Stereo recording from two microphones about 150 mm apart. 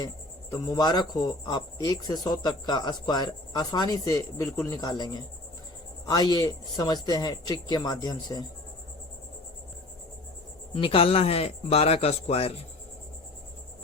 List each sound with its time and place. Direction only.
0.5 s speech: 25° left (ahead or behind)
10.8 s speech: 40° left (ahead or behind)